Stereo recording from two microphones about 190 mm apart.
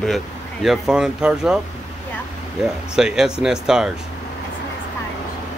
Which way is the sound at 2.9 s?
5° right (ahead or behind).